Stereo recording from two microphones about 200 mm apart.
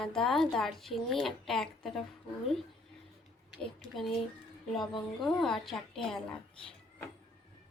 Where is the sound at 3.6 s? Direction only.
Centre (ahead or behind).